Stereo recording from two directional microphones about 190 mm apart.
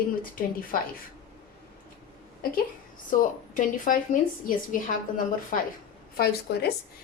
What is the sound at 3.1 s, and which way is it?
Speech, 45° left (ahead or behind).